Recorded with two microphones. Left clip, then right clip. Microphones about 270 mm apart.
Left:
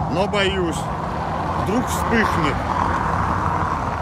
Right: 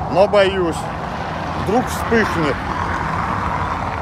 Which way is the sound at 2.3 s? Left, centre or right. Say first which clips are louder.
Even; left.